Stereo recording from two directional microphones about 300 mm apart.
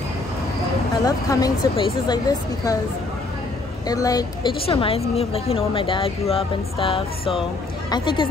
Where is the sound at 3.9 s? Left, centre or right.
Centre.